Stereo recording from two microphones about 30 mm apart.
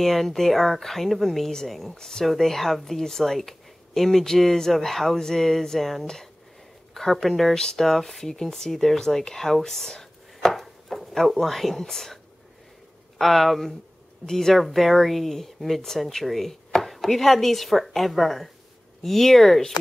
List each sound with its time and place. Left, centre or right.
0.0 s speech: centre
1.9 s speech: centre
2.2 s speech: centre
10.5 s a sound: centre
13.2 s speech: centre
16.3 s chopping: centre
19.0 s speech: centre